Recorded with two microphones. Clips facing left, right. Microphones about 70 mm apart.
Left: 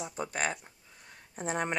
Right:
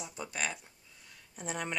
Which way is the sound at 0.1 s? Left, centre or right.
Left.